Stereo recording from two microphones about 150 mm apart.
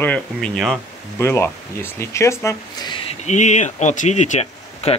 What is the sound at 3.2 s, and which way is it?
Speech, 50° left (ahead or behind).